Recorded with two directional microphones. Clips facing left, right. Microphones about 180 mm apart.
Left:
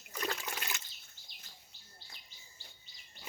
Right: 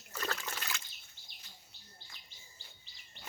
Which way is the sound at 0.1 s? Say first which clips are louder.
Left 1 dB; 15° left (ahead or behind).